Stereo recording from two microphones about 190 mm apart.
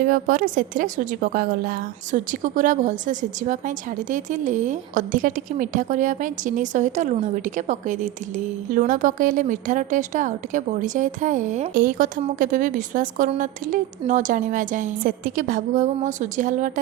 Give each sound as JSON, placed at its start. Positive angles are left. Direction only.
{"t": 0.0, "sound": "a woman's voice", "side_deg": -45}